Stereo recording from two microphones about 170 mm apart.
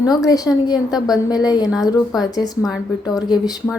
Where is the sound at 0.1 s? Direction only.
20° left (ahead or behind).